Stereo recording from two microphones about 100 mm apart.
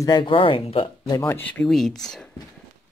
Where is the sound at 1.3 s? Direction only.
15° left (ahead or behind).